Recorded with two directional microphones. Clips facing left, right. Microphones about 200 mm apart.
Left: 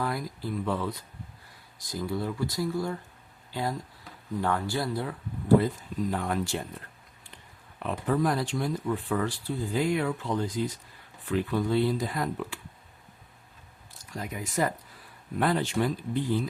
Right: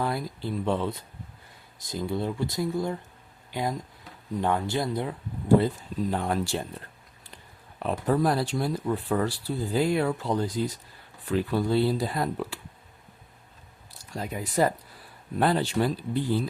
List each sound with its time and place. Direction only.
0.0 s speech: 25° right (ahead or behind)
7.8 s speech: 35° right (ahead or behind)
14.2 s speech: 30° right (ahead or behind)